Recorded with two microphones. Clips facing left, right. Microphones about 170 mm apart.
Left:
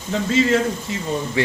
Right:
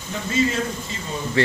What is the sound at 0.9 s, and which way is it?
Speech, 65° left (ahead or behind).